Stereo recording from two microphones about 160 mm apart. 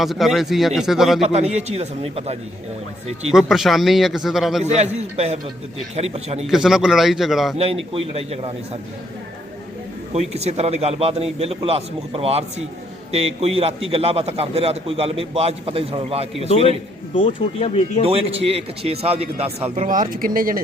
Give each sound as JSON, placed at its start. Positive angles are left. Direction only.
{"t": 0.0, "sound": "a man's voice", "side_deg": 0}
{"t": 1.2, "sound": "a man's voice", "side_deg": -45}
{"t": 3.3, "sound": "a man's voice", "side_deg": 0}
{"t": 4.6, "sound": "a man's voice", "side_deg": -45}
{"t": 6.4, "sound": "a man's voice", "side_deg": 0}
{"t": 7.6, "sound": "a man's voice", "side_deg": -40}
{"t": 10.1, "sound": "a man's voice", "side_deg": -40}
{"t": 17.2, "sound": "speech", "side_deg": 35}
{"t": 18.0, "sound": "a man's voice", "side_deg": -35}